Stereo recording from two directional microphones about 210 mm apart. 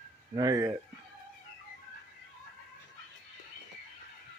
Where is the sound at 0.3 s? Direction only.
15° right (ahead or behind).